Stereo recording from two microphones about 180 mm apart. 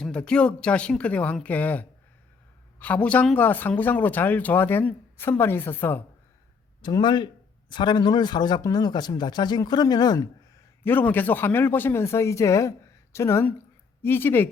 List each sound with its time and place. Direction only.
0.0 s speech: 5° left (ahead or behind)
6.8 s speech: 25° left (ahead or behind)
10.8 s speech: 10° left (ahead or behind)